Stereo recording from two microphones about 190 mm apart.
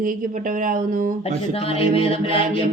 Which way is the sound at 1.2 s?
30° left (ahead or behind).